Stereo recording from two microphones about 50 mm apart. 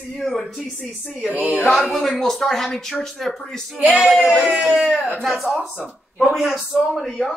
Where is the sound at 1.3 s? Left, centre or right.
Right.